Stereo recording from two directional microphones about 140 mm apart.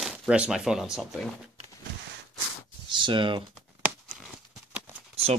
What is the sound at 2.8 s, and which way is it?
Speech, 35° right (ahead or behind).